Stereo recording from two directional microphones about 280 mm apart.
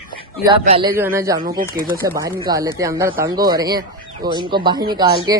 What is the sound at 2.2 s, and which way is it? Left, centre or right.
Speech, centre.